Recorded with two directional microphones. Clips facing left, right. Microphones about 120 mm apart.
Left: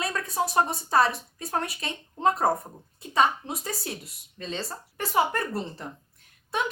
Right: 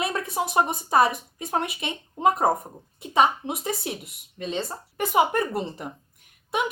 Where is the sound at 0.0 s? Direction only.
20° right (ahead or behind).